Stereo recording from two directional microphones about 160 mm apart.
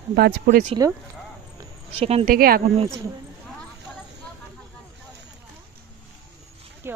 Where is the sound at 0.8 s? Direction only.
20° right (ahead or behind).